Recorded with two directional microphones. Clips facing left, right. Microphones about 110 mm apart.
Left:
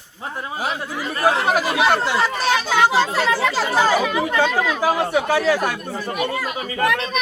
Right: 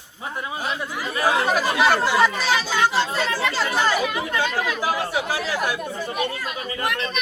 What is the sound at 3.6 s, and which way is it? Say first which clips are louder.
Speech: left 3 dB; 40° left (ahead or behind).